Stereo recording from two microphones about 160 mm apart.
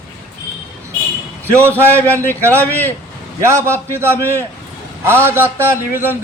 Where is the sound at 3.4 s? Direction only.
15° right (ahead or behind).